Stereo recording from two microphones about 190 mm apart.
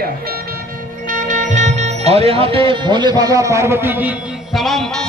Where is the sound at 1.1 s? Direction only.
45° right (ahead or behind); by 4.1 s 10° right (ahead or behind).